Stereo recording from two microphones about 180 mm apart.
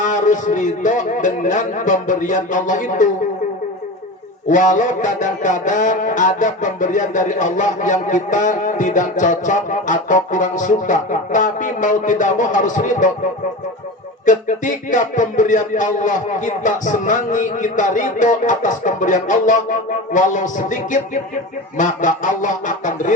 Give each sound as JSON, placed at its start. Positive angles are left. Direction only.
{"t": 0.0, "sound": "music", "side_deg": 45}
{"t": 4.4, "sound": "music", "side_deg": 45}
{"t": 14.3, "sound": "music", "side_deg": 45}